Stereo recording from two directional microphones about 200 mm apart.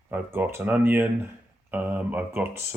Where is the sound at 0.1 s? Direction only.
10° right (ahead or behind).